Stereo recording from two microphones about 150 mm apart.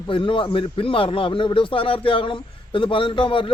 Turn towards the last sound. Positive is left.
turn(degrees=35)  # may be behind; listen again after turning